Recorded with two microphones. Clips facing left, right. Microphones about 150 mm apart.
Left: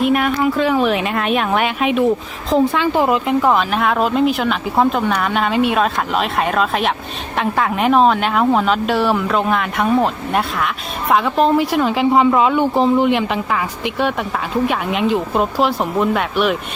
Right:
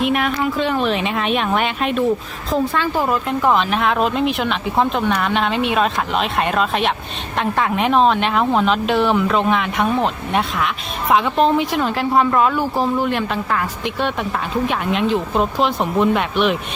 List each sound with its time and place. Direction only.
0.0 s speech: centre (ahead or behind)
3.4 s speech: 5° left (ahead or behind)